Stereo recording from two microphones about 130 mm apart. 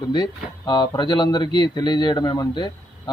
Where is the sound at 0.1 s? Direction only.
35° left (ahead or behind).